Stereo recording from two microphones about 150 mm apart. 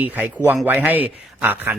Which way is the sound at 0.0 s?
10° right (ahead or behind).